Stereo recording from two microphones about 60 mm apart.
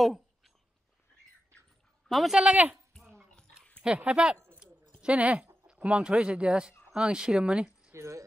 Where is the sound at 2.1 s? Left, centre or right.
Centre.